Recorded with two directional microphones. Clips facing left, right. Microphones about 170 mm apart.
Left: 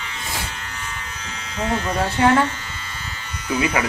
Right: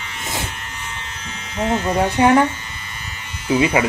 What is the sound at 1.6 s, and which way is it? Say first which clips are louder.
Speech: right 4 dB; 20° right (ahead or behind).